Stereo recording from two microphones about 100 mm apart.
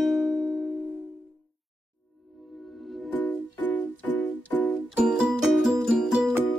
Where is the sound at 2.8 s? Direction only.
Centre (ahead or behind).